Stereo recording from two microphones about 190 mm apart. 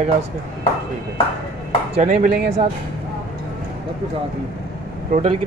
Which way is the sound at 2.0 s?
45° right (ahead or behind).